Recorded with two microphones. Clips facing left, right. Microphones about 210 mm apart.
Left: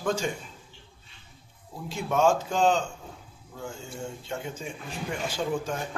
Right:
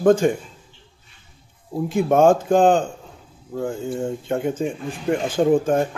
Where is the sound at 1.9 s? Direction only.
50° right (ahead or behind).